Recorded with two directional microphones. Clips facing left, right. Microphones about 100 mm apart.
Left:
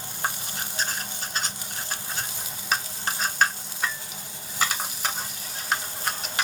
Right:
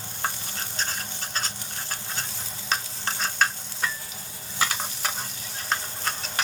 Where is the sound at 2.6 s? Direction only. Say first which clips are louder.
Left 1 dB; 10° left (ahead or behind).